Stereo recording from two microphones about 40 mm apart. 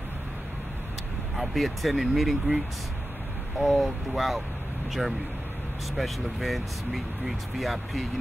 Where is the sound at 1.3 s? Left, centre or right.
Centre.